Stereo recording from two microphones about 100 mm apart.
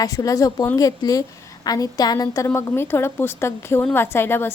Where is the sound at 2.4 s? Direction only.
25° left (ahead or behind).